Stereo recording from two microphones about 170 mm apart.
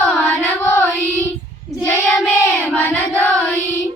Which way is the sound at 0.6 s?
10° left (ahead or behind).